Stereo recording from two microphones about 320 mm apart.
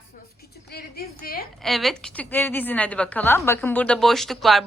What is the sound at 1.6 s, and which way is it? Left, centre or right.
A woman's voice, centre.